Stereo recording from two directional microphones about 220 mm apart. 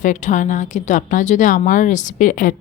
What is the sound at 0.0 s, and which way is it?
A woman's voice, 35° left (ahead or behind).